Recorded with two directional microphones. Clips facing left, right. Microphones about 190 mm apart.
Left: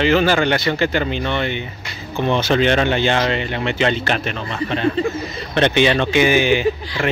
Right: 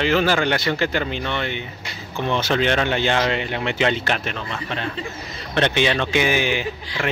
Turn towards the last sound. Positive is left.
turn(degrees=0)  # may be behind; listen again after turning